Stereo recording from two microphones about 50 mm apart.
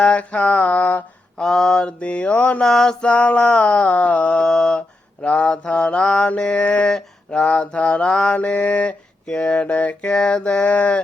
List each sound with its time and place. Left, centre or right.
0.0 s mantra: left
1.4 s mantra: centre
1.8 s mantra: left
2.6 s mantra: centre
3.1 s mantra: left
4.4 s mantra: centre
5.2 s mantra: left
8.3 s mantra: left
9.2 s mantra: centre
10.1 s mantra: centre